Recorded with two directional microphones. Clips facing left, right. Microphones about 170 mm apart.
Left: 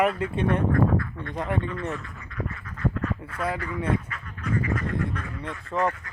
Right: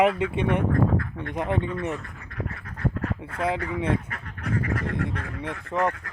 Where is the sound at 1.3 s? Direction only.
20° right (ahead or behind).